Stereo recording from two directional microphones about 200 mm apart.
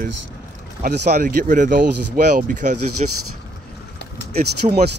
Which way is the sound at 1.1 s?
40° right (ahead or behind).